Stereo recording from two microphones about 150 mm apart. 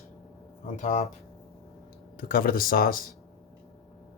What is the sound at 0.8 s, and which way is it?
Speech, 45° left (ahead or behind).